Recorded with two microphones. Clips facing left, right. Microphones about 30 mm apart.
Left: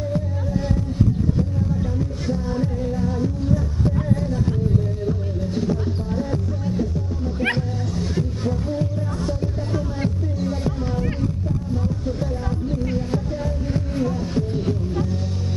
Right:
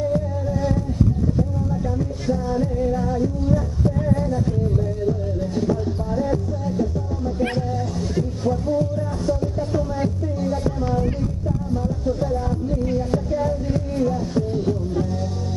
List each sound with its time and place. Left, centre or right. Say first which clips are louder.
2.0 s music: right 2 dB; centre
2.9 s music: right 2 dB; centre
5.0 s music: right 2 dB; centre
6.3 s music: right 1 dB; centre
7.3 s cat: left 1 dB; left
8.7 s music: right 3 dB; centre